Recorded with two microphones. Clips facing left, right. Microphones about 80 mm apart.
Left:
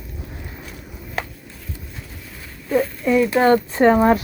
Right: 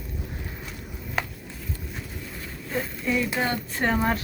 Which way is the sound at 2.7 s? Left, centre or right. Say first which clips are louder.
Left 10 dB; centre.